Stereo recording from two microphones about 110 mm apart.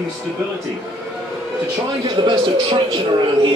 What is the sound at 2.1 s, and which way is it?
Speech, 50° right (ahead or behind).